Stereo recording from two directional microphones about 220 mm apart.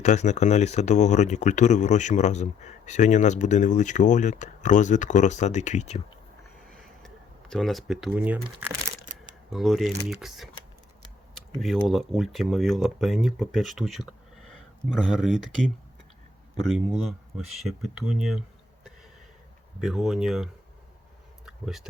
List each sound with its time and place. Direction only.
0.0 s speech: 30° left (ahead or behind)
7.0 s speech: centre (ahead or behind)
9.5 s speech: centre (ahead or behind)
11.6 s speech: centre (ahead or behind)
16.6 s speech: centre (ahead or behind)
19.8 s speech: centre (ahead or behind)
21.4 s a sound: centre (ahead or behind)